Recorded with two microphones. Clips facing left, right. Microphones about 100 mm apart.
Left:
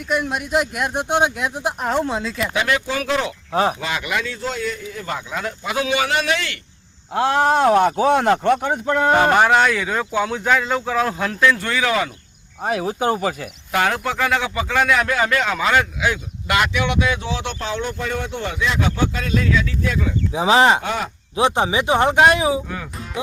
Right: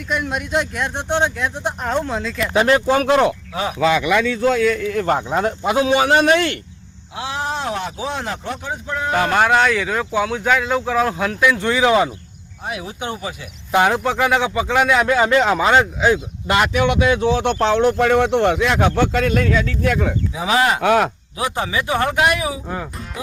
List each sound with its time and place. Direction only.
0.1 s speech: centre (ahead or behind)
2.5 s speech: 40° right (ahead or behind)
3.5 s speech: 40° left (ahead or behind)
5.0 s a man's voice: 40° right (ahead or behind)
7.1 s speech: 55° left (ahead or behind)
9.3 s speech: 5° left (ahead or behind); by 12.1 s 20° right (ahead or behind)
12.6 s speech: 40° left (ahead or behind)
13.7 s speech: 20° right (ahead or behind)
16.8 s speech: 45° right (ahead or behind)
20.3 s a man's voice: 25° left (ahead or behind)
20.8 s speech: 70° right (ahead or behind)
21.3 s a man's voice: 25° left (ahead or behind)